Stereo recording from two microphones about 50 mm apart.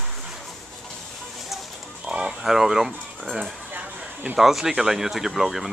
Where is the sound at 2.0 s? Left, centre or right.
Centre.